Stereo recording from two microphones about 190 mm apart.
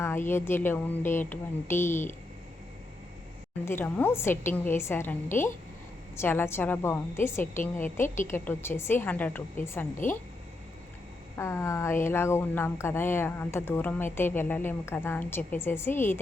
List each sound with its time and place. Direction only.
0.0 s speech: 10° left (ahead or behind)
3.7 s speech: 10° left (ahead or behind)
8.0 s a woman's voice: 40° left (ahead or behind)
8.3 s speech: 10° left (ahead or behind)
10.0 s speech: 45° left (ahead or behind)
11.3 s speech: 15° left (ahead or behind)